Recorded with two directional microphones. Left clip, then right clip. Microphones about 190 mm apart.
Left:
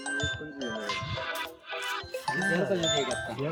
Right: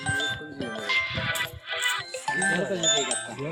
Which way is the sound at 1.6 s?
40° left (ahead or behind).